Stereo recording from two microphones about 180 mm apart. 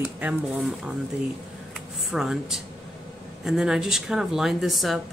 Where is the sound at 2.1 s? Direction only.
Centre (ahead or behind).